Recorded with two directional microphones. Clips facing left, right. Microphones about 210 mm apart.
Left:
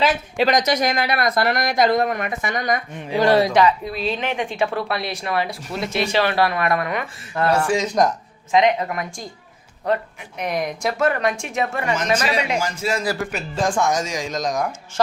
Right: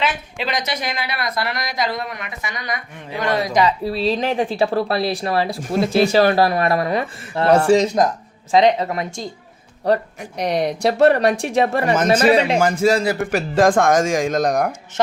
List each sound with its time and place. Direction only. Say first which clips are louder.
0.0 s a woman's voice: left 5 dB; 45° left (ahead or behind)
3.2 s speech: left 5 dB; 30° left (ahead or behind)
3.6 s a woman's voice: right 1 dB; 30° right (ahead or behind)
9.8 s speech: right 4 dB; 35° right (ahead or behind)
12.5 s speech: right 8 dB; 55° right (ahead or behind)
12.9 s a woman's voice: right 5 dB; 30° right (ahead or behind)
13.7 s speech: right 4 dB; 55° right (ahead or behind)